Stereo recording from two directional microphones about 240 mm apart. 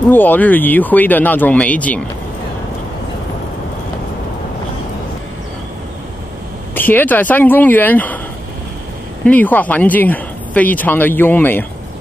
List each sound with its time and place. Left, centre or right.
0.1 s speech: centre
6.7 s speech: centre
9.2 s speech: centre